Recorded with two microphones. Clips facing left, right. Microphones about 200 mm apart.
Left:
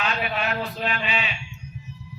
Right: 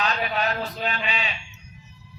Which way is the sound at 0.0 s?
40° right (ahead or behind).